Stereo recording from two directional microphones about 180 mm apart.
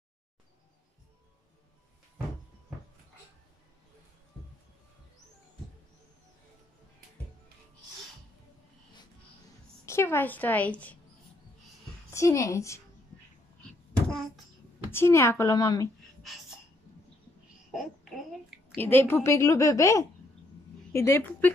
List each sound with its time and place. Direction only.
9.8 s a woman's voice: 15° left (ahead or behind)
12.1 s a woman's voice: 15° left (ahead or behind)
14.0 s a sound: 5° left (ahead or behind)
14.9 s a woman's voice: 15° left (ahead or behind)
16.2 s sneeze: centre (ahead or behind)
17.7 s a sound: centre (ahead or behind)
18.8 s a woman's voice: 10° left (ahead or behind)